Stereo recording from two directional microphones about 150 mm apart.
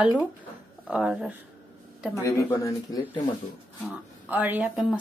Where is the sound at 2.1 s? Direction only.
20° left (ahead or behind).